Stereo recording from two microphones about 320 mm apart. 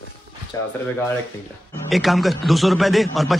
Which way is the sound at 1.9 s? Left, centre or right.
Centre.